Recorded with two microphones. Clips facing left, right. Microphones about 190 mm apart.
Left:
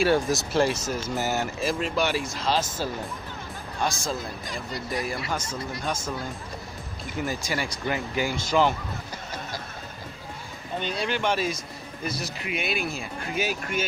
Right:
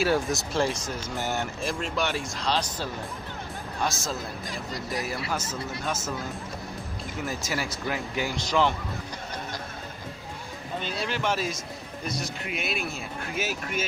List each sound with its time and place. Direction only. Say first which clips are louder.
0.0 s a man's voice: left 3 dB; centre (ahead or behind)
7.2 s a man's voice: left 1 dB; centre (ahead or behind)
10.8 s a man's voice: left 3 dB; centre (ahead or behind)